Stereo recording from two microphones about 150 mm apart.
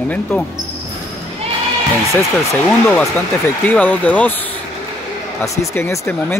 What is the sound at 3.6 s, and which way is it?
Speech, 10° left (ahead or behind).